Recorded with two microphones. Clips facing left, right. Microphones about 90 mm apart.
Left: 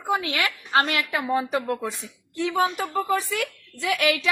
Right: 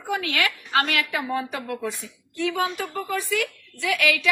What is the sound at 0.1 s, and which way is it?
A woman's voice, 25° left (ahead or behind).